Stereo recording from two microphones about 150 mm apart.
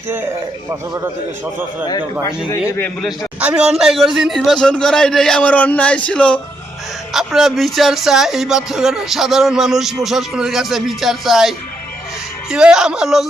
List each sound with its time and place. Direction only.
2.5 s a man's voice: 15° left (ahead or behind)
3.4 s speech: 5° right (ahead or behind)